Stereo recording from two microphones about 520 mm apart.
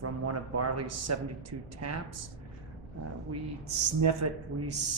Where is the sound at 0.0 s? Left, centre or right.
Right.